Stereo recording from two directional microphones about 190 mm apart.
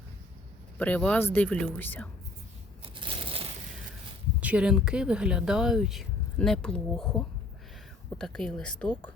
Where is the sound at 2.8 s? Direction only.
30° right (ahead or behind).